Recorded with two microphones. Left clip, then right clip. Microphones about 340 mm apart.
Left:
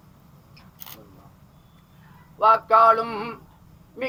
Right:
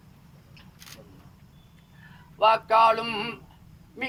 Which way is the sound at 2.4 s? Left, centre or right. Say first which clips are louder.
Left 3 dB; right.